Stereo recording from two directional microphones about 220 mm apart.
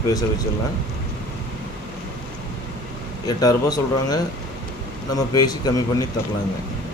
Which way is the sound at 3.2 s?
15° left (ahead or behind).